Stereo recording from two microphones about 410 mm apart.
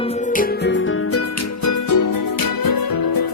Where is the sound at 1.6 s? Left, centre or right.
Left.